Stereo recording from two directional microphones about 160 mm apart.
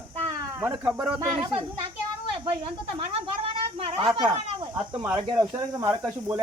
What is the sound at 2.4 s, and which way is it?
Speech, 35° right (ahead or behind).